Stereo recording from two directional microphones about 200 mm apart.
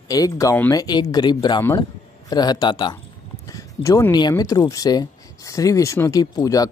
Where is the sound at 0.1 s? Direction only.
15° left (ahead or behind).